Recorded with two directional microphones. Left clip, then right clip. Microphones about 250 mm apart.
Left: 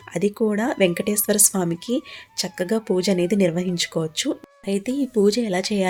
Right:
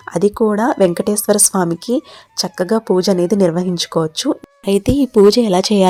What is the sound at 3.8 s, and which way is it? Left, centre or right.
Speech, centre.